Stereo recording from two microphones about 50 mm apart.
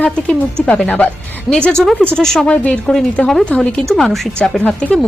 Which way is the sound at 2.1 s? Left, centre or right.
Centre.